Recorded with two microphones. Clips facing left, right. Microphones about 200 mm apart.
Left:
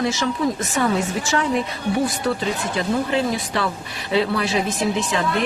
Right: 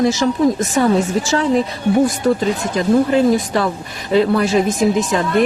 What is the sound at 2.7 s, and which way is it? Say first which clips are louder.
Speech: right 8 dB; 40° right (ahead or behind).